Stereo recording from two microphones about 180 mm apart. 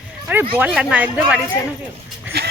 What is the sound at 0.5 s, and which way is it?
Speech, 10° right (ahead or behind).